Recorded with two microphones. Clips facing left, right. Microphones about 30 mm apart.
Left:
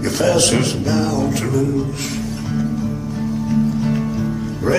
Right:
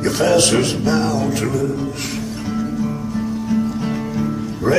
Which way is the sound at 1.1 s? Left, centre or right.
Centre.